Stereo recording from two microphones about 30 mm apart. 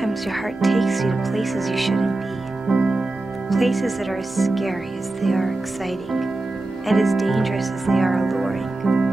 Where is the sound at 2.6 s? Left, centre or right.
Right.